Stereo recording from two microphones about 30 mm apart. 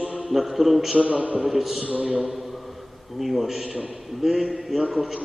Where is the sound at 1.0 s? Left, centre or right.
Right.